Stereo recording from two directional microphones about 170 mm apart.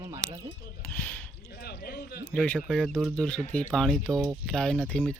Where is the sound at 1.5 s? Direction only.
65° left (ahead or behind).